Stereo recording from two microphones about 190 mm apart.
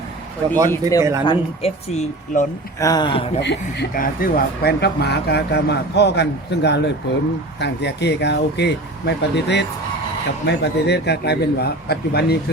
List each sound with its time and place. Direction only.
0.7 s speech: 20° left (ahead or behind)
1.2 s speech: 30° left (ahead or behind)
2.8 s a man's voice: 20° left (ahead or behind)
3.4 s speech: 60° left (ahead or behind)